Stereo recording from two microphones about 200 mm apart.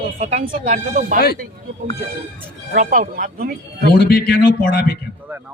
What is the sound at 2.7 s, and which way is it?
Speech, 40° right (ahead or behind).